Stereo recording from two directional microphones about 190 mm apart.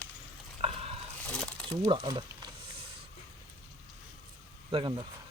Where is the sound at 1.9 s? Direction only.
25° right (ahead or behind).